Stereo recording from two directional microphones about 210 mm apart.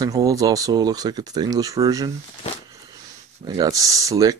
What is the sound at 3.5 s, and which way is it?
Speech, 15° right (ahead or behind).